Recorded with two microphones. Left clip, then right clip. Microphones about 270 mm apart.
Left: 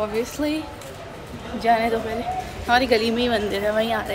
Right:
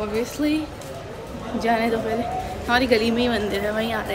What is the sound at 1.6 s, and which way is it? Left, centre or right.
A woman's voice, centre.